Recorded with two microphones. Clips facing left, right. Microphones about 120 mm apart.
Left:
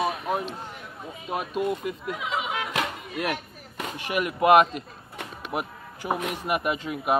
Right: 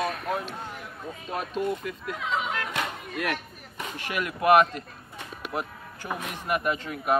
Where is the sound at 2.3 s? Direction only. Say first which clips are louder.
Right 1 dB; 10° left (ahead or behind).